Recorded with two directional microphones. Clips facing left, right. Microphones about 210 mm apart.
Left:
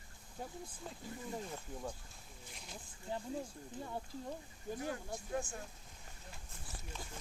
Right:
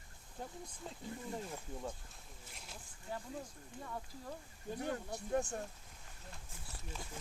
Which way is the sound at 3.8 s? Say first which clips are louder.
Left 3 dB; 30° left (ahead or behind).